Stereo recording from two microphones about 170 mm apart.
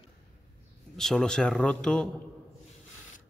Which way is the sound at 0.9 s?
5° left (ahead or behind).